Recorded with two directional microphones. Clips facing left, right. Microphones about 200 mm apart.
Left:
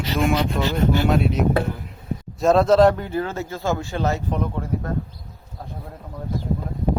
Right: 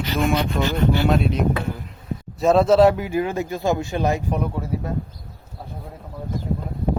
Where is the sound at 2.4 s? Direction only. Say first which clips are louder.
Even; centre (ahead or behind).